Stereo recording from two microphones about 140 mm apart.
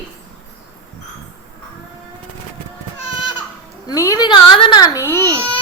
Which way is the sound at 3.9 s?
25° left (ahead or behind).